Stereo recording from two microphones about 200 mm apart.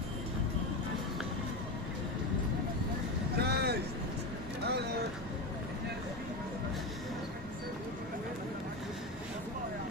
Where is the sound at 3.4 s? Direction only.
55° right (ahead or behind).